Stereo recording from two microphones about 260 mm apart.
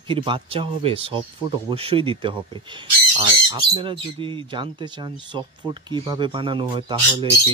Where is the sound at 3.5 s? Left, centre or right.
Centre.